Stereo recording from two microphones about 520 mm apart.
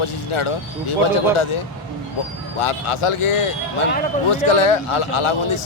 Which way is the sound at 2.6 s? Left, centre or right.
Left.